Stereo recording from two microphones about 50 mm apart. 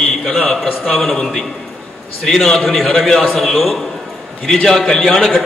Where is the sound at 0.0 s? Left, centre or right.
Centre.